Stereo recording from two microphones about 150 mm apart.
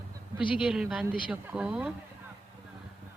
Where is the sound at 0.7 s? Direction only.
5° right (ahead or behind).